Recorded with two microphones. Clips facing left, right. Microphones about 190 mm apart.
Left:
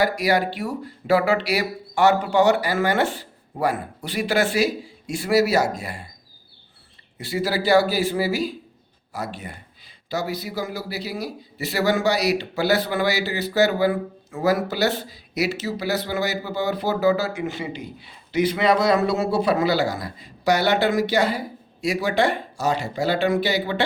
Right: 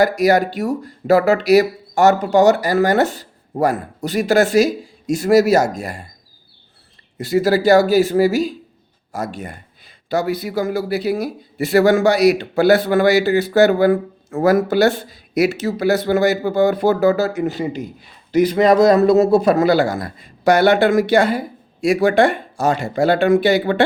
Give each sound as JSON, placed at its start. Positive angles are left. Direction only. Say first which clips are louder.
{"t": 0.0, "sound": "a man's voice", "louder": "right 6 dB", "side_deg": -45}
{"t": 7.2, "sound": "a man's voice", "louder": "right 9 dB", "side_deg": -45}